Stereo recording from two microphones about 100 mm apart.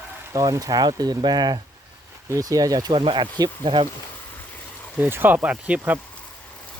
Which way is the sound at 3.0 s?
55° right (ahead or behind).